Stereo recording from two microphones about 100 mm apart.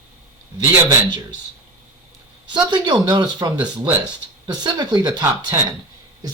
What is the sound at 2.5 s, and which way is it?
Speech, 50° right (ahead or behind).